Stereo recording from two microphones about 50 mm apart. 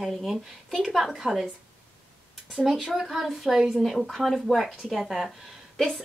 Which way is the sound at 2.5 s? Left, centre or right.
Centre.